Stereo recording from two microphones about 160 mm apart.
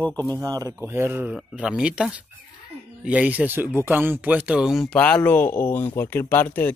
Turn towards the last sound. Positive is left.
turn(degrees=10)  # may be behind; listen again after turning